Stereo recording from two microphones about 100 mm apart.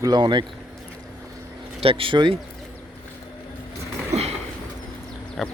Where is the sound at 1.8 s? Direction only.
65° right (ahead or behind).